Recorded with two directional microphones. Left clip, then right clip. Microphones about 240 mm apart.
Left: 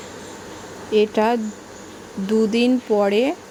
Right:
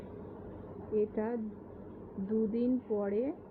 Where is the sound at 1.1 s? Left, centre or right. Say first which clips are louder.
Left 18 dB; left.